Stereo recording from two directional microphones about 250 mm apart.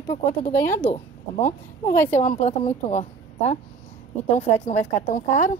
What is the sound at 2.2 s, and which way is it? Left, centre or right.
A woman's voice, left.